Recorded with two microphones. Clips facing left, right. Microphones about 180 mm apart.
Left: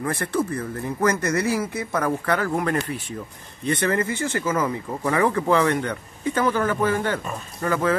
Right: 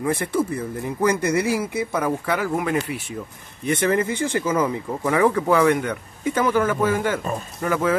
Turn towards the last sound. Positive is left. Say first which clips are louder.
# right 1 dB
turn(degrees=-10)  # may be behind; listen again after turning